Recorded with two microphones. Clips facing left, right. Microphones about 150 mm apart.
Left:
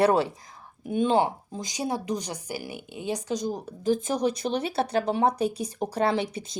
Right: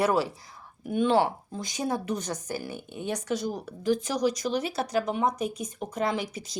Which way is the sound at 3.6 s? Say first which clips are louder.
Left 2 dB; 45° left (ahead or behind).